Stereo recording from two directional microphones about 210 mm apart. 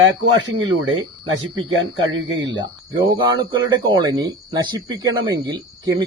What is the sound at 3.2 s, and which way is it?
Speech, 20° right (ahead or behind).